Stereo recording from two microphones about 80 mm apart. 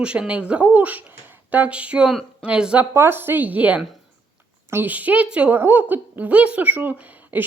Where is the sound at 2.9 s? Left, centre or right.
Right.